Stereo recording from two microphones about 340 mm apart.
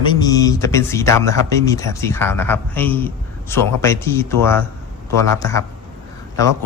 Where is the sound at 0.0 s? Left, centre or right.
Centre.